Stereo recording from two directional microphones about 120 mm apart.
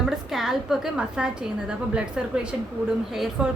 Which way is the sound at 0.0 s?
Centre (ahead or behind).